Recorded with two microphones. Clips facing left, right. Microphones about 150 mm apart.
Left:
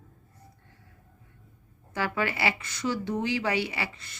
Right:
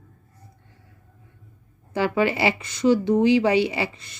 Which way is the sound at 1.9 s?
20° right (ahead or behind).